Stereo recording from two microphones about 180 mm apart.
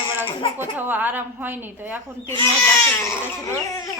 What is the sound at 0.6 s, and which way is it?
A woman's voice, 10° right (ahead or behind).